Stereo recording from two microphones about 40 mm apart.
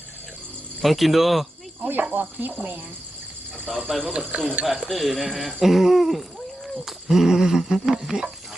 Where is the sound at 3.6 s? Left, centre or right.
Centre.